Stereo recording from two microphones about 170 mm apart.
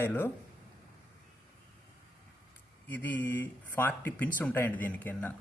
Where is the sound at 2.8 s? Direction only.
10° left (ahead or behind).